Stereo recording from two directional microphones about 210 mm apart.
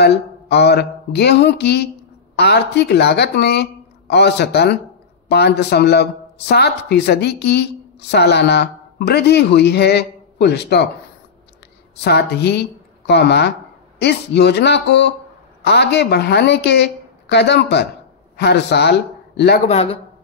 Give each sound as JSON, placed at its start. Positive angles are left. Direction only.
{"t": 0.0, "sound": "speech", "side_deg": 50}
{"t": 12.0, "sound": "a woman's voice", "side_deg": 50}
{"t": 19.6, "sound": "a man's voice", "side_deg": 30}